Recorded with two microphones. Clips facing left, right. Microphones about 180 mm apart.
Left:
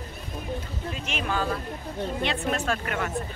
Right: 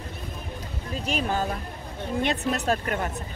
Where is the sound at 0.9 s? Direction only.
35° right (ahead or behind).